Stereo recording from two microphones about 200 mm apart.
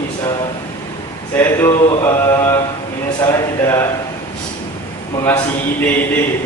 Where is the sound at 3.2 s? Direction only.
15° left (ahead or behind).